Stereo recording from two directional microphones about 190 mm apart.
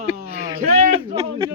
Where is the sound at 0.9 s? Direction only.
30° right (ahead or behind).